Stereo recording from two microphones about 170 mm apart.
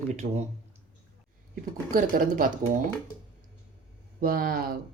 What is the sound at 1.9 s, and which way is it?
Speech, 55° right (ahead or behind).